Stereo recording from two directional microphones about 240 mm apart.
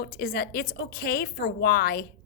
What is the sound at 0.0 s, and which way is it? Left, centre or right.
A woman's voice, left.